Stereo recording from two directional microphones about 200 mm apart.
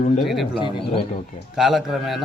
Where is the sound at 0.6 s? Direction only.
25° left (ahead or behind).